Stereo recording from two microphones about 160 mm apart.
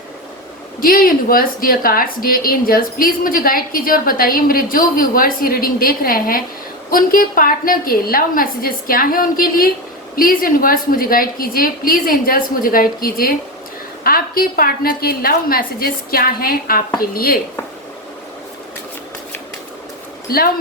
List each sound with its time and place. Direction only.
0.8 s a woman's voice: 65° left (ahead or behind)
20.3 s a woman's voice: 70° left (ahead or behind)